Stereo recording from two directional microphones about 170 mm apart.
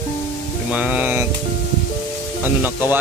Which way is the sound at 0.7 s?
10° right (ahead or behind).